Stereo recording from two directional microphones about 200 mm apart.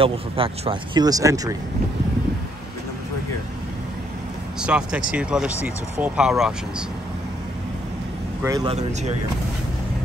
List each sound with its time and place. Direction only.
0.0 s speech: 25° right (ahead or behind)
4.6 s speech: 5° right (ahead or behind)
8.6 s speech: 35° right (ahead or behind)